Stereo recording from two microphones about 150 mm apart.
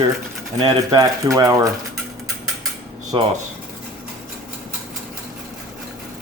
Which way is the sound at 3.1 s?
30° right (ahead or behind).